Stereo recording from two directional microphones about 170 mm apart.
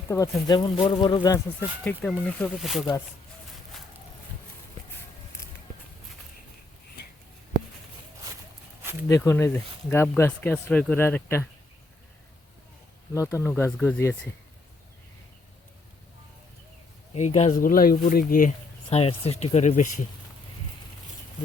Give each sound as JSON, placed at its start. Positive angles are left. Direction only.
{"t": 0.1, "sound": "speech", "side_deg": 20}
{"t": 1.8, "sound": "speech", "side_deg": 10}
{"t": 9.0, "sound": "speech", "side_deg": 15}
{"t": 13.1, "sound": "speech", "side_deg": 15}
{"t": 17.2, "sound": "speech", "side_deg": 40}
{"t": 17.6, "sound": "speech", "side_deg": 55}
{"t": 18.9, "sound": "speech", "side_deg": 35}